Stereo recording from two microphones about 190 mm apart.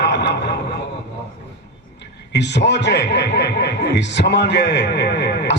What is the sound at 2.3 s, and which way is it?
Speech, 65° left (ahead or behind).